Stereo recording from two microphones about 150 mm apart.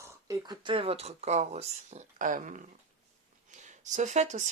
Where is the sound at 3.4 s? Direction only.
55° right (ahead or behind).